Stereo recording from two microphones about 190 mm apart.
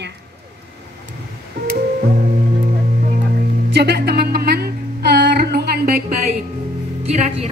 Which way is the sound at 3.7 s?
60° right (ahead or behind).